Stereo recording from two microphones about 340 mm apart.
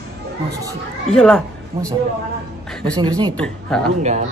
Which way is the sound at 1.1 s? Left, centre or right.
Centre.